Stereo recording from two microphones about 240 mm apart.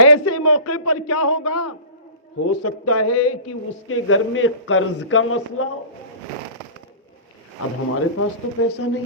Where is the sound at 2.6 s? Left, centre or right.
Left.